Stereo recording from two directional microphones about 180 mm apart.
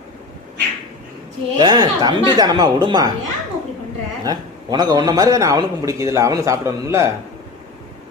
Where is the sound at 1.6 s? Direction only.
25° right (ahead or behind).